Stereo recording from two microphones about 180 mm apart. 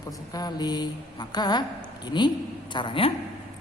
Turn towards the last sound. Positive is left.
turn(degrees=30)  # may be behind; listen again after turning